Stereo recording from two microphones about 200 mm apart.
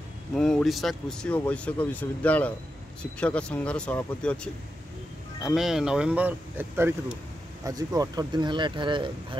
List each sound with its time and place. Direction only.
0.4 s speech: 5° left (ahead or behind)
5.4 s speech: centre (ahead or behind); by 9.4 s 25° right (ahead or behind)